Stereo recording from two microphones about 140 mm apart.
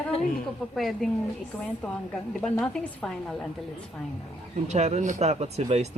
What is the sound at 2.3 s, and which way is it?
Speech, 5° left (ahead or behind).